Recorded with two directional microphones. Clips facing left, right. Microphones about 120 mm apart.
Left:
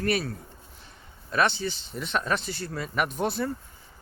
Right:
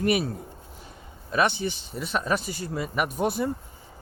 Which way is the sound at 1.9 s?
5° right (ahead or behind).